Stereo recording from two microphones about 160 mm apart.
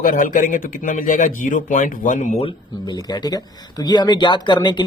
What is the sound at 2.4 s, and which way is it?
Speech, 30° left (ahead or behind).